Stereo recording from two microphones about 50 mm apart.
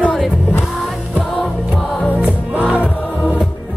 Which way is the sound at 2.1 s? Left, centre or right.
Right.